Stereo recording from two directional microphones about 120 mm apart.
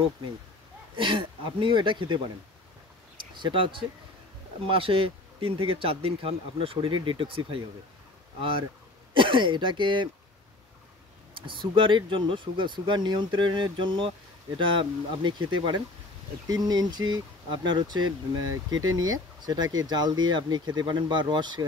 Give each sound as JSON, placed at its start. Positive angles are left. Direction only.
{"t": 0.9, "sound": "speech", "side_deg": -45}
{"t": 3.3, "sound": "speech", "side_deg": -45}
{"t": 11.3, "sound": "speech", "side_deg": -45}